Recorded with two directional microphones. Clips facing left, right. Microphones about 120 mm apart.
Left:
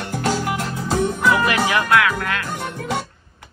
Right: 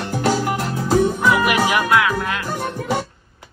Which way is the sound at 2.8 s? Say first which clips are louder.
Right 2 dB; centre (ahead or behind).